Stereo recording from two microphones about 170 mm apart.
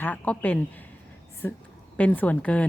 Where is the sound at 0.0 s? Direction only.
10° left (ahead or behind).